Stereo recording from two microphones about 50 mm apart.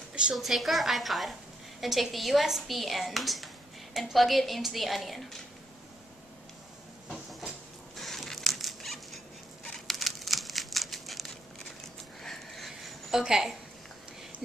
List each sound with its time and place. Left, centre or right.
0.3 s speech: centre
7.9 s patter: centre
9.8 s a sound: centre
13.2 s a woman's voice: centre